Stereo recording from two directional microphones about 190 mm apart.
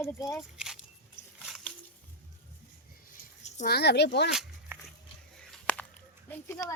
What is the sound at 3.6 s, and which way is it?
Speech, 60° left (ahead or behind).